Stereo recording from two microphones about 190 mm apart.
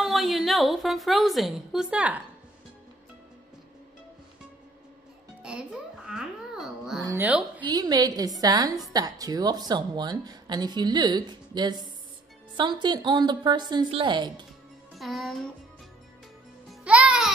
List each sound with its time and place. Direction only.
0.0 s a woman's voice: centre (ahead or behind)
5.4 s a child's voice: 5° right (ahead or behind)
7.7 s a woman's voice: 20° right (ahead or behind)
15.0 s a child's voice: centre (ahead or behind)
16.8 s music: 5° right (ahead or behind)